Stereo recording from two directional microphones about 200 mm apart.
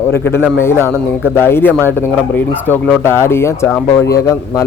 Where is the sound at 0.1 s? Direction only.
10° left (ahead or behind).